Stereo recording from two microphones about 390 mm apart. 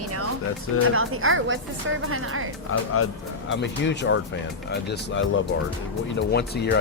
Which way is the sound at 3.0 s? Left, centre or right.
Left.